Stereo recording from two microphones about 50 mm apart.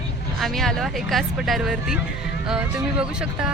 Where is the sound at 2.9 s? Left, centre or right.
Centre.